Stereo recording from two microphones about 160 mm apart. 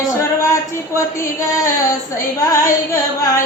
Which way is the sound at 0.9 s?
20° left (ahead or behind).